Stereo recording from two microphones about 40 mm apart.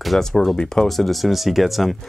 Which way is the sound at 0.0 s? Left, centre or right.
Centre.